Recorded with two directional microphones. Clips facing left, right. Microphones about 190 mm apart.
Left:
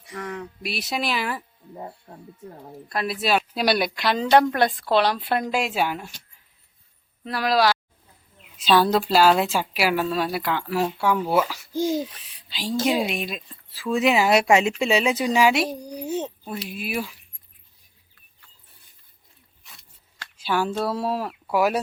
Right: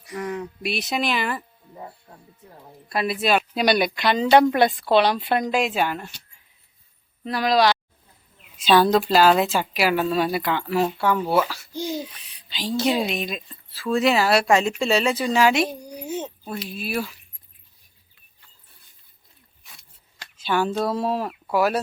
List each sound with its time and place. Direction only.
0.1 s speech: 5° right (ahead or behind)
2.9 s speech: centre (ahead or behind)
7.3 s speech: 5° left (ahead or behind)
11.7 s a child's voice: 45° left (ahead or behind)
12.5 s a woman's voice: 5° left (ahead or behind)
15.8 s a child's voice: 35° left (ahead or behind)
16.0 s speech: centre (ahead or behind)
16.6 s speech: 10° left (ahead or behind)
19.6 s a sound: centre (ahead or behind)
20.3 s speech: 5° left (ahead or behind)